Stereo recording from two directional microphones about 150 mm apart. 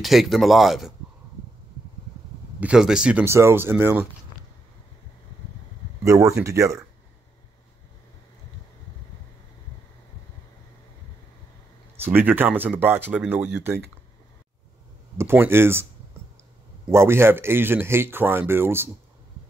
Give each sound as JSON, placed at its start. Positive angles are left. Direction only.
{"t": 0.0, "sound": "speech", "side_deg": 0}
{"t": 2.6, "sound": "speech", "side_deg": -5}
{"t": 6.2, "sound": "speech", "side_deg": -20}
{"t": 12.0, "sound": "speech", "side_deg": -15}
{"t": 15.1, "sound": "speech", "side_deg": -15}
{"t": 16.9, "sound": "speech", "side_deg": -15}